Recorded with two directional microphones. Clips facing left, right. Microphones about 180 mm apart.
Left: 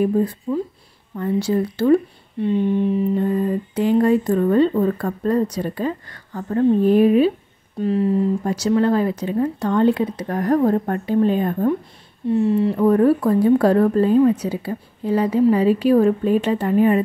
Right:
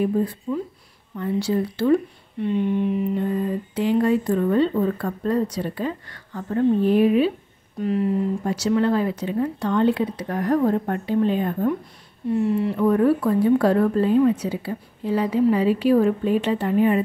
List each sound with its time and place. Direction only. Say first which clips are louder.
0.0 s speech: left 3 dB; 40° left (ahead or behind)
2.4 s mantra: left 3 dB; 30° left (ahead or behind)
3.7 s speech: left 3 dB; 45° left (ahead or behind)
7.8 s mantra: left 3 dB; 30° left (ahead or behind)
8.5 s speech: left 1 dB; 40° left (ahead or behind)
12.3 s speech: left 4 dB; 25° left (ahead or behind); by 17.0 s 45° left (ahead or behind)